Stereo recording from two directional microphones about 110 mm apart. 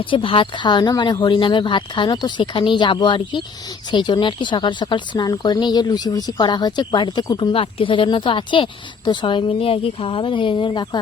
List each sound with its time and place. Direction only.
0.0 s speech: 50° left (ahead or behind)
7.5 s speech: 55° left (ahead or behind)